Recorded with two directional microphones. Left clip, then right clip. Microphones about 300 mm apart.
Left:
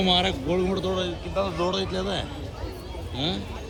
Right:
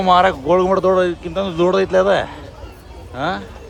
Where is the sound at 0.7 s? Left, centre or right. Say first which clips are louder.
Right 13 dB; right.